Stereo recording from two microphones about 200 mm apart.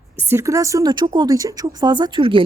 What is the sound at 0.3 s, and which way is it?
A man's voice, 15° right (ahead or behind).